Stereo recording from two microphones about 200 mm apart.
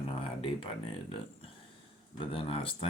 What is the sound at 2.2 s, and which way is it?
Speech, 25° left (ahead or behind).